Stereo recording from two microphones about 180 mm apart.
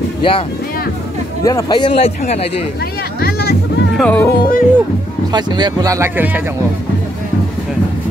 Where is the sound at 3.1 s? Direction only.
60° left (ahead or behind).